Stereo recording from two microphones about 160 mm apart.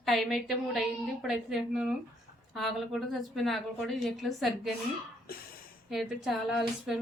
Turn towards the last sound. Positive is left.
turn(degrees=0)  # may be behind; listen again after turning